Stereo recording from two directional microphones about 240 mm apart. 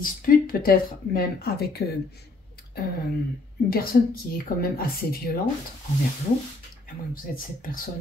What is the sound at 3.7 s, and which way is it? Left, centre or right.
Speech, left.